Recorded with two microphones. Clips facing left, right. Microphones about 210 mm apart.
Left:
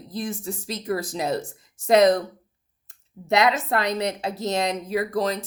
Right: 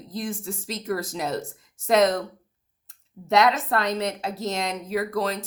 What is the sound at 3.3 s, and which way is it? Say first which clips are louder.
Speech: even; 15° left (ahead or behind).